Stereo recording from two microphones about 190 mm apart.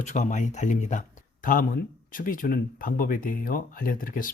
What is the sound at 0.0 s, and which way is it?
Speech, 40° left (ahead or behind).